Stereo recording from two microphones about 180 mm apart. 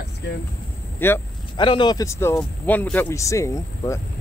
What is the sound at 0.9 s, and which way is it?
Speech, 10° left (ahead or behind).